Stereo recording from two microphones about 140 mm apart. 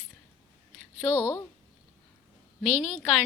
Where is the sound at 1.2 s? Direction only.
25° left (ahead or behind).